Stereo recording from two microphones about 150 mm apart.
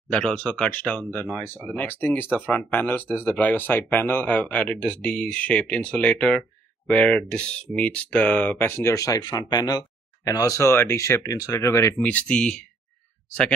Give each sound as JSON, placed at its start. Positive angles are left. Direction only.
{"t": 0.1, "sound": "speech", "side_deg": 5}